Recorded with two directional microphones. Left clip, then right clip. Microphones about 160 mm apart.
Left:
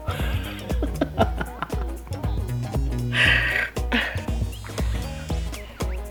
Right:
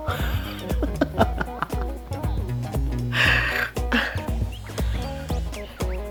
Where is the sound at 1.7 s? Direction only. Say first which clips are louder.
Right 2 dB; centre (ahead or behind).